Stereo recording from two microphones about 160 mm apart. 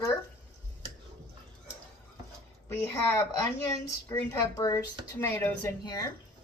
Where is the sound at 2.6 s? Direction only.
15° left (ahead or behind).